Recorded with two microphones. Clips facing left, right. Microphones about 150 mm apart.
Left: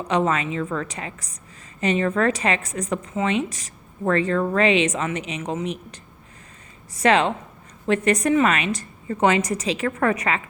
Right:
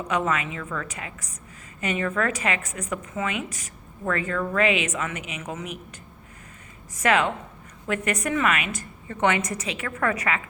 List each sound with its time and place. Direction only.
0.1 s speech: 30° left (ahead or behind)
7.0 s a woman's voice: 30° left (ahead or behind)